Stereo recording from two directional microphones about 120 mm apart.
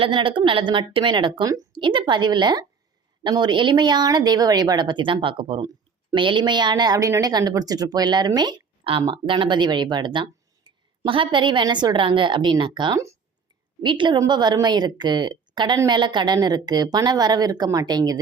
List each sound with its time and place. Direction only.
0.0 s a woman's voice: 45° right (ahead or behind)
8.8 s speech: 50° right (ahead or behind); by 18.2 s 35° right (ahead or behind)